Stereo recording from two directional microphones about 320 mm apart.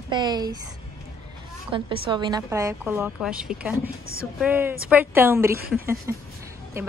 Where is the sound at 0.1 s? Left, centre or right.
Centre.